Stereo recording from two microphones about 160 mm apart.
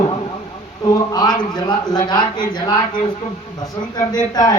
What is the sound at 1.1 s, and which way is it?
Speech, 25° left (ahead or behind).